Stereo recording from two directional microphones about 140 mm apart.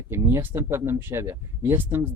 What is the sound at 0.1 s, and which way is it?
Speech, 15° right (ahead or behind).